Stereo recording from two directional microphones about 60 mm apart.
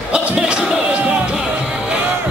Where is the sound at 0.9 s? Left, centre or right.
Right.